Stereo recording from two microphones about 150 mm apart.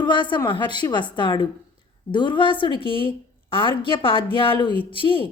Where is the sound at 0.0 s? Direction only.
30° left (ahead or behind).